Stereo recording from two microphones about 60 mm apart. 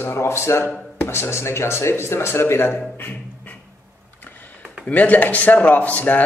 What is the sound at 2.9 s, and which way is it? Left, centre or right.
Music, left.